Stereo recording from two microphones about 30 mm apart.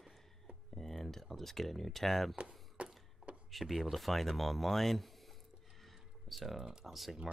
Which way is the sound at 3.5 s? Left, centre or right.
Centre.